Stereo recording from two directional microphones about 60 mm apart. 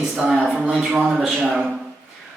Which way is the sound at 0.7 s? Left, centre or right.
Centre.